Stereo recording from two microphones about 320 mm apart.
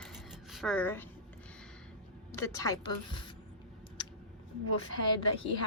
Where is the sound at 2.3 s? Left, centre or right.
Centre.